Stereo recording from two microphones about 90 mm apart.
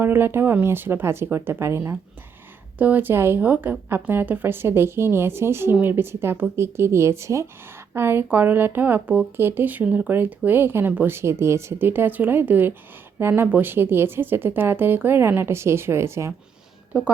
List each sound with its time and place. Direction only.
0.0 s speech: 25° right (ahead or behind)
2.7 s a woman's voice: 20° right (ahead or behind)
16.9 s speech: 10° right (ahead or behind)